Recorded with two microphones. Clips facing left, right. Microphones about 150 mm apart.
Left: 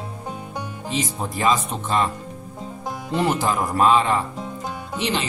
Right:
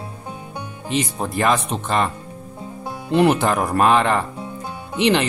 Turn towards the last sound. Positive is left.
turn(degrees=-65)  # may be behind; listen again after turning